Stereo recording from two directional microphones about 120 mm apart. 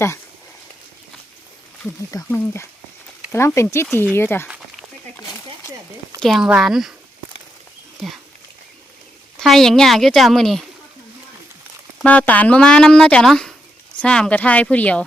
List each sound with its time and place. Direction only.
2.3 s speech: 20° left (ahead or behind)
4.4 s a sound: 10° right (ahead or behind)
6.1 s a woman's voice: centre (ahead or behind)
9.4 s a woman's voice: centre (ahead or behind)
12.0 s speech: 15° left (ahead or behind)